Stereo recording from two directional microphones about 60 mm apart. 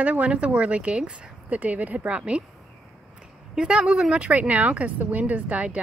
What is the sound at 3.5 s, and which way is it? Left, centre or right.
Speech, centre.